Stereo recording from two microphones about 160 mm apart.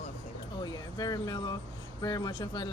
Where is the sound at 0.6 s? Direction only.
25° left (ahead or behind).